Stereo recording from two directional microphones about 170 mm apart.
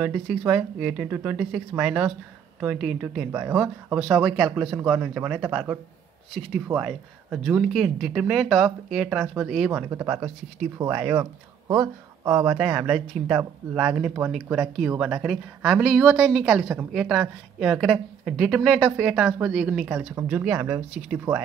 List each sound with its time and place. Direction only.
0.0 s speech: 5° right (ahead or behind)
9.7 s speech: 15° right (ahead or behind)
12.4 s speech: 5° right (ahead or behind)